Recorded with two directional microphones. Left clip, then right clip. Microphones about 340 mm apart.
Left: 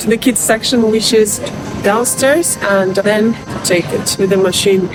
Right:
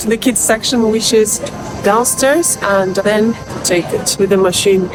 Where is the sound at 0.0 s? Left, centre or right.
Centre.